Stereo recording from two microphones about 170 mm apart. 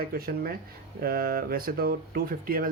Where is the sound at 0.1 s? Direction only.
60° right (ahead or behind).